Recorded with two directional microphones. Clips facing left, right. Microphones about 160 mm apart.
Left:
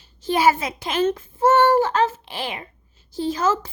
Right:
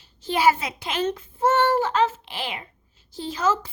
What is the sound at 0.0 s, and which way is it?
A child's voice, 45° left (ahead or behind).